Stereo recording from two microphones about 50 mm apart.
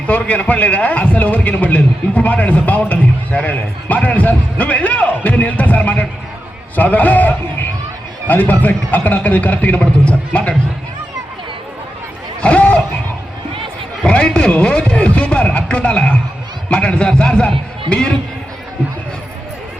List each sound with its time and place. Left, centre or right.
0.1 s a man's voice: left
12.4 s a sound: left
14.1 s a man's voice: centre